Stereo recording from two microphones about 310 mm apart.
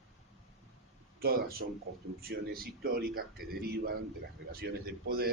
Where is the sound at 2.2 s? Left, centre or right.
Right.